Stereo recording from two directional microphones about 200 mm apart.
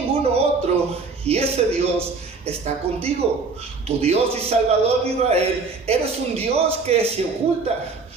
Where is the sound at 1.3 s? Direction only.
30° right (ahead or behind).